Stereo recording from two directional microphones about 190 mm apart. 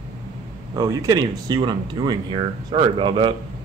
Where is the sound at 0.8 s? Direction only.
20° right (ahead or behind).